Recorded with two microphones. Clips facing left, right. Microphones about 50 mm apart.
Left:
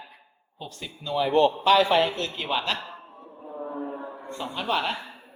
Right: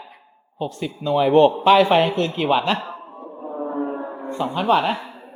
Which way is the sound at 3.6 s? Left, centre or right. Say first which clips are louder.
Right 7 dB; right.